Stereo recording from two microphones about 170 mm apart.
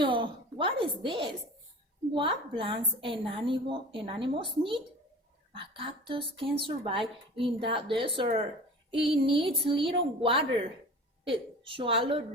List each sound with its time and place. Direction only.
0.0 s a woman's voice: 30° right (ahead or behind)